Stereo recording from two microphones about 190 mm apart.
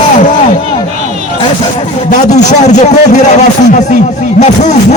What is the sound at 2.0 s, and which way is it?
A man's voice, 40° left (ahead or behind).